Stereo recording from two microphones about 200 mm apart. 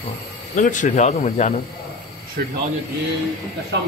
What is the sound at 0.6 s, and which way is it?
Speech, 40° left (ahead or behind).